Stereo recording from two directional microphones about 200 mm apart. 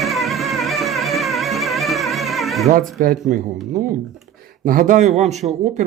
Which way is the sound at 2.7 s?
45° right (ahead or behind).